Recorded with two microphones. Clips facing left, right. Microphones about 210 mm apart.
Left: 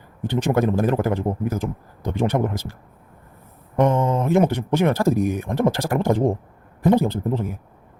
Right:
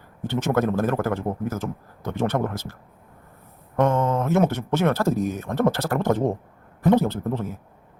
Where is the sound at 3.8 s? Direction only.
15° left (ahead or behind).